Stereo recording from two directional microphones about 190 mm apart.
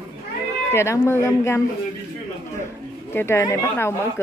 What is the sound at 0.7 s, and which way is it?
Speech, 15° left (ahead or behind).